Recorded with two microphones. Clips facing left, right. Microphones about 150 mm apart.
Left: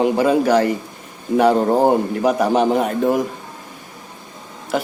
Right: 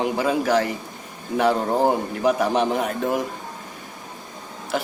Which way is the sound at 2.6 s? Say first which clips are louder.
Left 6 dB; 40° left (ahead or behind).